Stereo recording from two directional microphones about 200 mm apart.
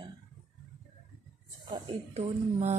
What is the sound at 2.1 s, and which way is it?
Speech, 35° right (ahead or behind).